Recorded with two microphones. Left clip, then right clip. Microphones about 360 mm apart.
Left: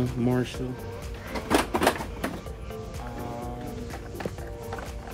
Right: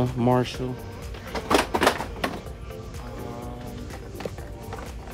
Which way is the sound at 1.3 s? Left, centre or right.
Centre.